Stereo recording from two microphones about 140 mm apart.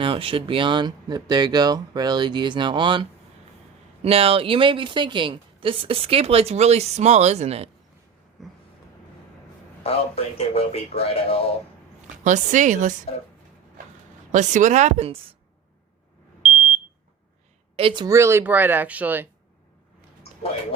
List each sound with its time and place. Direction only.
0.0 s a woman's voice: 40° right (ahead or behind)
8.4 s a sound: centre (ahead or behind)
9.8 s a man's voice: 45° left (ahead or behind)
12.2 s speech: 60° right (ahead or behind)
14.3 s speech: 60° right (ahead or behind)
17.7 s speech: 35° right (ahead or behind)
18.1 s speech: 20° right (ahead or behind)